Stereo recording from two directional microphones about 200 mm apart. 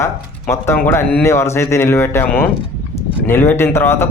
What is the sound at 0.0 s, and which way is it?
A man's voice, 15° left (ahead or behind).